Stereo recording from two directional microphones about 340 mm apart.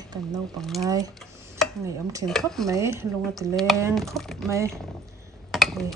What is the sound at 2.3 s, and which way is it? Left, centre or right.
Speech, centre.